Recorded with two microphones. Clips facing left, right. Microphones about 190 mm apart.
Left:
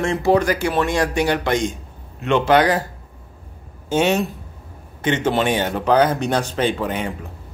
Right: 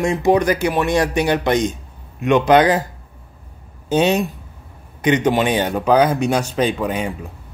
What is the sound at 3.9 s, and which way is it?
Speech, 15° right (ahead or behind).